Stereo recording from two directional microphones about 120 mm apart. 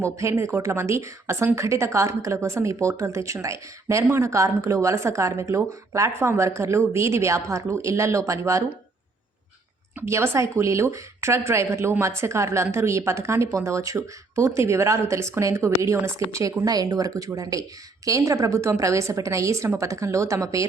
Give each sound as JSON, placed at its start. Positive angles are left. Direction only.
{"t": 0.0, "sound": "speech", "side_deg": -25}
{"t": 10.1, "sound": "speech", "side_deg": -25}